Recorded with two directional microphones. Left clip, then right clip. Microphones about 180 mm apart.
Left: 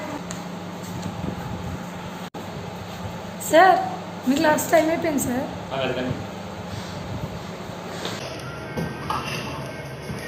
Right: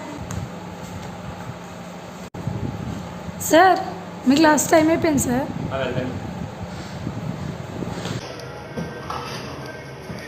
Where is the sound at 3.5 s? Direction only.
60° right (ahead or behind).